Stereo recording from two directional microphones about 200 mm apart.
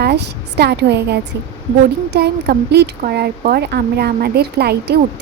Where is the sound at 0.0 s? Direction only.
55° right (ahead or behind).